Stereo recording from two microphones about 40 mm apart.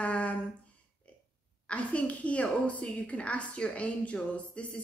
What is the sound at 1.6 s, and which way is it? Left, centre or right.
A woman's voice, left.